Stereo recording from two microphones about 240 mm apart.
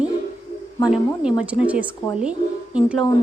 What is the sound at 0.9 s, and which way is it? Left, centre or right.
A woman's voice, centre.